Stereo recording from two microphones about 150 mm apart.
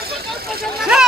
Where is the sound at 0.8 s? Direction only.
5° right (ahead or behind).